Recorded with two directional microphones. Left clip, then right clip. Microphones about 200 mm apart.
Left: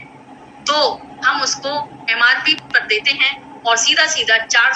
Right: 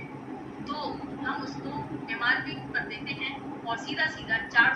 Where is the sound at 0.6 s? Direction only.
45° left (ahead or behind).